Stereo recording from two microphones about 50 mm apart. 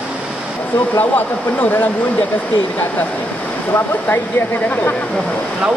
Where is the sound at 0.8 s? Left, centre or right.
Left.